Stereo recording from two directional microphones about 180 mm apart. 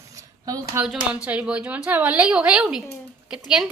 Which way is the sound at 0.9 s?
5° right (ahead or behind).